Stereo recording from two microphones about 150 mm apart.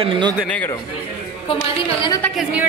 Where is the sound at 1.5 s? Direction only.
35° left (ahead or behind).